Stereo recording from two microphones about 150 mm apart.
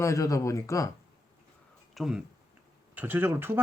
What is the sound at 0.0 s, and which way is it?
Speech, 20° left (ahead or behind).